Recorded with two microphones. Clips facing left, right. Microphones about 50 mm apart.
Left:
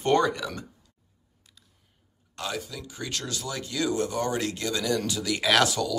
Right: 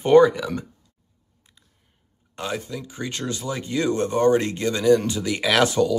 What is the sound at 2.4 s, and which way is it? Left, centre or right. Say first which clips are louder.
Speech: right 4 dB; right.